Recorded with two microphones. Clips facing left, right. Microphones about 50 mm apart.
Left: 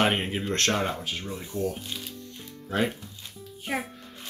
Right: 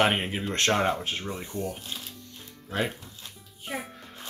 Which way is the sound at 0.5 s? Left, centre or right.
Right.